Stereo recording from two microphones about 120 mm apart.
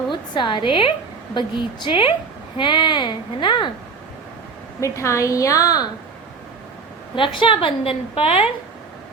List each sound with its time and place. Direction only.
0.1 s a woman's voice: 40° left (ahead or behind)
4.8 s a woman's voice: 25° left (ahead or behind)
7.2 s a woman's voice: 45° left (ahead or behind)